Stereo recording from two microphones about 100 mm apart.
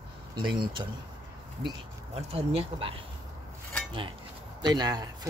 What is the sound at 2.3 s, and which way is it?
Speech, 70° right (ahead or behind).